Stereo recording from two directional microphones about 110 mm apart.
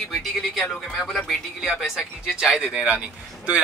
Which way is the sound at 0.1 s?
Centre (ahead or behind).